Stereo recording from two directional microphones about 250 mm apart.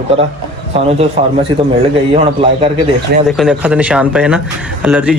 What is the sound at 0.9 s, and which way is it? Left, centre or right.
Speech, right.